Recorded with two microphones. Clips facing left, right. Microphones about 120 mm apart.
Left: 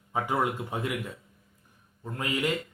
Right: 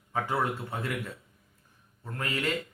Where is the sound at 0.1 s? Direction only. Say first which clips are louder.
Left 2 dB; 15° left (ahead or behind).